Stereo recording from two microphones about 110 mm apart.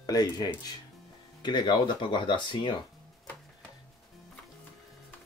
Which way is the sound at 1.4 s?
45° left (ahead or behind).